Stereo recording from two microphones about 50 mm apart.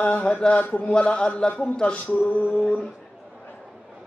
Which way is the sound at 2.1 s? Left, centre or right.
Left.